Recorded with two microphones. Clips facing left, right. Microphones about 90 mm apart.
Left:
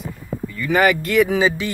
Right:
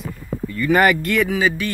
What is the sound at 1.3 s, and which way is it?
Speech, 25° left (ahead or behind).